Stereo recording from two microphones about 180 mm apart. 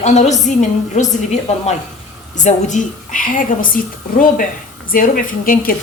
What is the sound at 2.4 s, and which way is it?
A woman's voice, 45° left (ahead or behind).